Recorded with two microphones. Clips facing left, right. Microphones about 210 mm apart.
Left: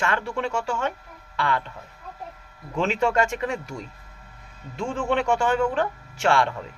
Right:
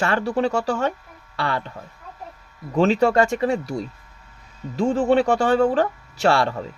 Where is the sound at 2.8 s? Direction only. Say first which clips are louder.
Right 6 dB; 35° right (ahead or behind).